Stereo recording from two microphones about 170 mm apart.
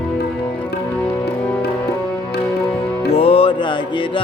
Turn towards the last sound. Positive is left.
turn(degrees=30)  # may be behind; listen again after turning